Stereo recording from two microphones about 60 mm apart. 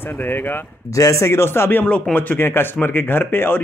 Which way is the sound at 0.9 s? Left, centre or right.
Left.